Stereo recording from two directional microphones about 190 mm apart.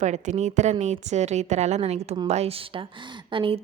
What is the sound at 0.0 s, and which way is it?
A woman's voice, 40° right (ahead or behind).